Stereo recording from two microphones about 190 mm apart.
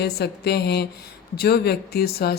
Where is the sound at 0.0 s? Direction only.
60° left (ahead or behind).